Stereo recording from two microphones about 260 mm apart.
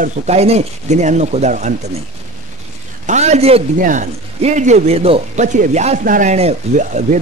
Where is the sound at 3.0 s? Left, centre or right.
Right.